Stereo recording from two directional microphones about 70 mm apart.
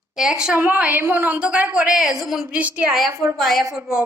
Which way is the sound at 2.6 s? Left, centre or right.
Centre.